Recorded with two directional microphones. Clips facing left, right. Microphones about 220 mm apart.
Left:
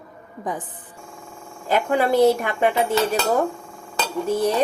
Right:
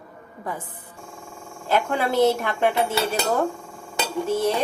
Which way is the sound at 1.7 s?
5° left (ahead or behind).